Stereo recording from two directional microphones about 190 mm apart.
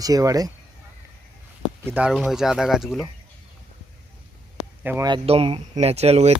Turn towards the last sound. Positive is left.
turn(degrees=-35)  # may be behind; listen again after turning